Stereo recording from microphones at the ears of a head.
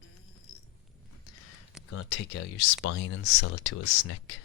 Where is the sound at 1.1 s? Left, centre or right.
Left.